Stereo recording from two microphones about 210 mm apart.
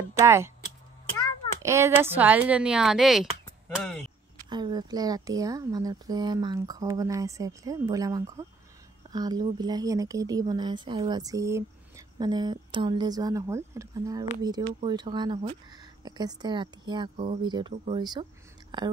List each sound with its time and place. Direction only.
0.2 s speech: 15° right (ahead or behind)
1.6 s speech: 15° right (ahead or behind); by 4.0 s centre (ahead or behind)
4.5 s speech: 20° right (ahead or behind)